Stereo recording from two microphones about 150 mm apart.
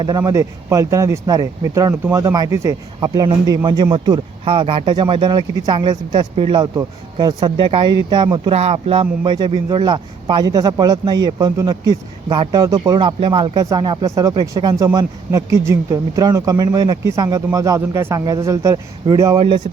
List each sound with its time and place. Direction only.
0.0 s speech: 25° right (ahead or behind)